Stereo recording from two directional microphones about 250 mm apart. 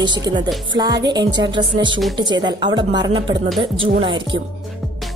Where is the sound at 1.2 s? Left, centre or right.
Right.